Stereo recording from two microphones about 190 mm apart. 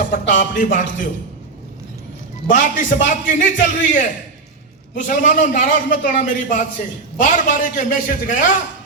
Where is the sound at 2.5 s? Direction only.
40° left (ahead or behind).